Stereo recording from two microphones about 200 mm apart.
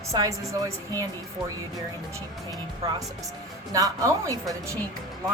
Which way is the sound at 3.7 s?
15° right (ahead or behind).